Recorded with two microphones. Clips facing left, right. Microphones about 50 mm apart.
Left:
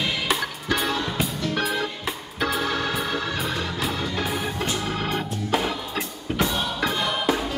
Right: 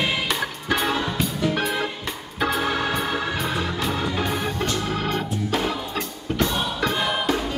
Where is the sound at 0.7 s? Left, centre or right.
Centre.